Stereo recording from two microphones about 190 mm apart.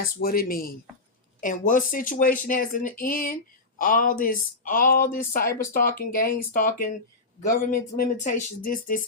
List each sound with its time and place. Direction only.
0.0 s speech: 50° left (ahead or behind)